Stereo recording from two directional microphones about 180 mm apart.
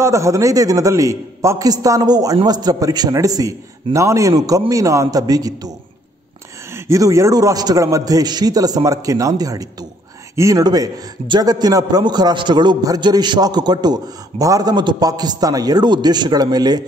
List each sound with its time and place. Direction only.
0.0 s a man's voice: 15° right (ahead or behind)
6.7 s a man's voice: 15° right (ahead or behind)